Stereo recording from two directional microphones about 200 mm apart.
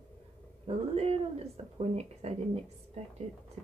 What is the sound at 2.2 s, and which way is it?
Speech, 30° right (ahead or behind).